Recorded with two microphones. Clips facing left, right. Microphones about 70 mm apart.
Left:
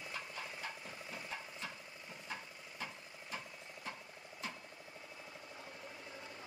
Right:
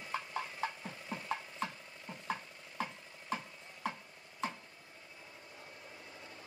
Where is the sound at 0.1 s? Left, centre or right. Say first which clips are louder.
Right 8 dB; right.